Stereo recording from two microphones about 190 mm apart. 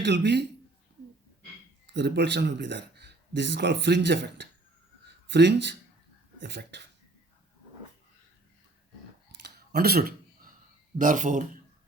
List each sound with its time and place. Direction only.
0.0 s speech: 65° right (ahead or behind)
1.9 s speech: 65° right (ahead or behind)
9.4 s a sound: 55° right (ahead or behind)
10.9 s speech: 45° right (ahead or behind)